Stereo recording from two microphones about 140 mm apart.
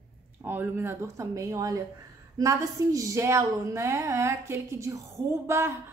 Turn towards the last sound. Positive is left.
turn(degrees=-20)  # may be behind; listen again after turning